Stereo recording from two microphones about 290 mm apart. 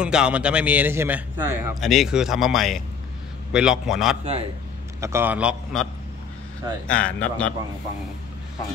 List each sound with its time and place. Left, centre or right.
0.0 s a man's voice: centre
4.2 s a man's voice: right
5.0 s a man's voice: centre
6.9 s a man's voice: centre